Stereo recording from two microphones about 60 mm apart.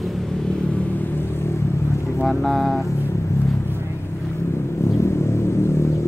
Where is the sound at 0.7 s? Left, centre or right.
Left.